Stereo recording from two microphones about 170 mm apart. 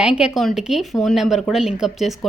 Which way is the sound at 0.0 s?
5° right (ahead or behind).